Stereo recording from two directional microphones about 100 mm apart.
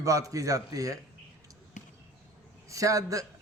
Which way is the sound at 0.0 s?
35° right (ahead or behind).